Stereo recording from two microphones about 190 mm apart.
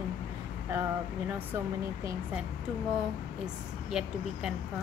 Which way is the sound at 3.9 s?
5° right (ahead or behind).